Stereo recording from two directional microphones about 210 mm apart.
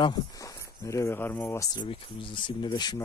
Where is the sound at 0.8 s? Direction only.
15° left (ahead or behind).